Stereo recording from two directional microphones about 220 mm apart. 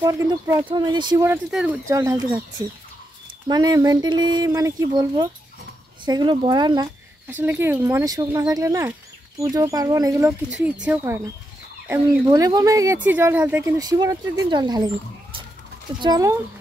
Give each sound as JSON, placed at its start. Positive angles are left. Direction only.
{"t": 0.0, "sound": "speech", "side_deg": -15}
{"t": 3.4, "sound": "speech", "side_deg": -20}
{"t": 7.3, "sound": "speech", "side_deg": -10}
{"t": 16.0, "sound": "speech", "side_deg": -15}